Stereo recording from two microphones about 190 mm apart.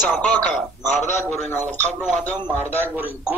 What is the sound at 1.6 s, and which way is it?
Speech, 40° right (ahead or behind).